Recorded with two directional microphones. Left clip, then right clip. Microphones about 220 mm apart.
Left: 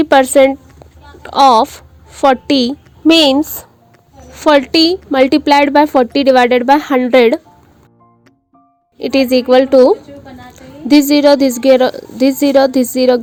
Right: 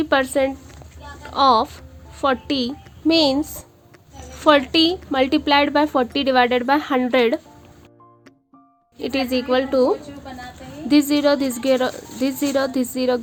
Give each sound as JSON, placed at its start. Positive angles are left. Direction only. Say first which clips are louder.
{"t": 0.0, "sound": "a woman's voice", "louder": "left 11 dB", "side_deg": 35}
{"t": 9.0, "sound": "speech", "louder": "left 10 dB", "side_deg": 30}